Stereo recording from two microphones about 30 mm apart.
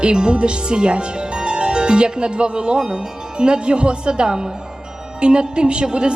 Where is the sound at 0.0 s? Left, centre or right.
Right.